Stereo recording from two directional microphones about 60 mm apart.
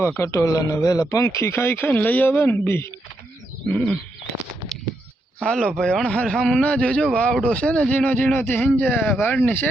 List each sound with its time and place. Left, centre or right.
0.2 s speech: left
2.4 s speech: left
3.7 s speech: left
5.4 s speech: centre; by 9.6 s left